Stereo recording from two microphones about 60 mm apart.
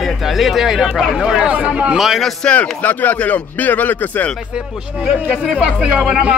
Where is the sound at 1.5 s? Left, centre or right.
Right.